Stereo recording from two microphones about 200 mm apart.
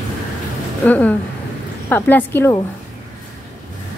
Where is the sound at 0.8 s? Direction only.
5° left (ahead or behind).